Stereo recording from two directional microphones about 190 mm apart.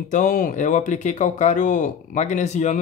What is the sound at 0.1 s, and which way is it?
Speech, 45° left (ahead or behind).